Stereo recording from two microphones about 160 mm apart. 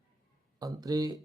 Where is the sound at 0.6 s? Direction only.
20° right (ahead or behind).